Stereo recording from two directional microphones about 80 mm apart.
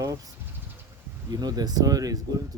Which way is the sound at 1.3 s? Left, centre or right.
Right.